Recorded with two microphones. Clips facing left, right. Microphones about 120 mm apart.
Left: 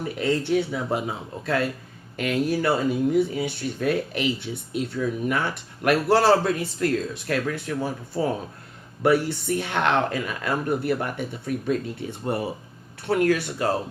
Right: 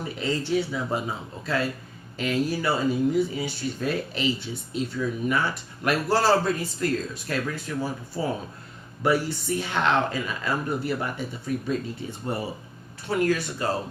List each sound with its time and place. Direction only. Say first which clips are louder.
0.2 s speech: left 3 dB; 60° left (ahead or behind)